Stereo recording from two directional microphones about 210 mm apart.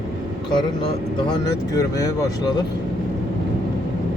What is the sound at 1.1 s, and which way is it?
Speech, 20° left (ahead or behind).